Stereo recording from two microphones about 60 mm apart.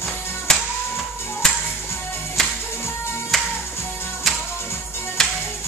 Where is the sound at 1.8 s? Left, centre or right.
Left.